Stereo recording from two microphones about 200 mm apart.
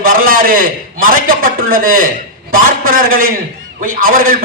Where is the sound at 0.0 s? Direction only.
45° right (ahead or behind).